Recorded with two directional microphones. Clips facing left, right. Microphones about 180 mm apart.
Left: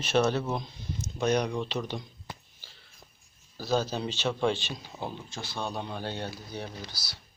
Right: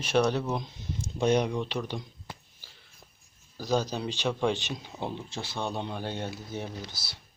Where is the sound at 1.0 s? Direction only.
30° right (ahead or behind).